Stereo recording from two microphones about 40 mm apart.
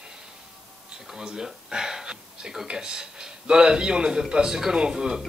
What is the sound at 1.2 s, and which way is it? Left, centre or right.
Speech, centre.